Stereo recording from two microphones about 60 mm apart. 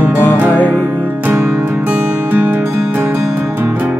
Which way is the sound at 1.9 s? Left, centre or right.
Right.